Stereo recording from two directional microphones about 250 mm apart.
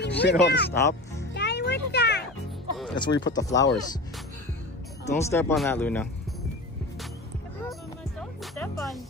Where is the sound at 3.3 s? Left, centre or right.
Centre.